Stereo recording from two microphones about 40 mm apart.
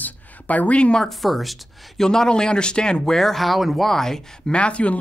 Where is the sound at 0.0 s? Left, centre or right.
Left.